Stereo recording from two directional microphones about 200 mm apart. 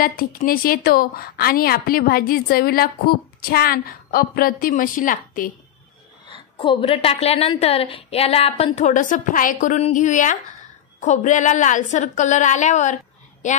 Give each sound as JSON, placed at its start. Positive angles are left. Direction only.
{"t": 0.0, "sound": "a woman's voice", "side_deg": 45}
{"t": 6.2, "sound": "a woman's voice", "side_deg": 25}